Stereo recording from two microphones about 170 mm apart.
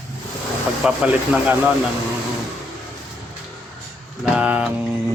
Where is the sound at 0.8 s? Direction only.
5° right (ahead or behind).